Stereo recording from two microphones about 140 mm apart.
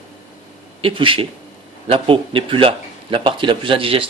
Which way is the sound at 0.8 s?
40° right (ahead or behind).